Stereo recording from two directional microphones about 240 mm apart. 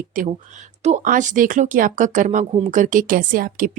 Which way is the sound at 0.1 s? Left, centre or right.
Right.